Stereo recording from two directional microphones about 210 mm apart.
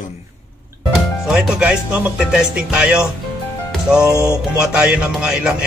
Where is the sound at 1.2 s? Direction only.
Centre (ahead or behind).